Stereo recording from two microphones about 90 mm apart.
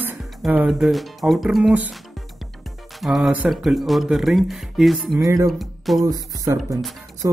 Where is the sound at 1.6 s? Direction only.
15° right (ahead or behind).